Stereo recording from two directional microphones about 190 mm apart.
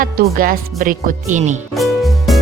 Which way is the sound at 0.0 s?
50° right (ahead or behind).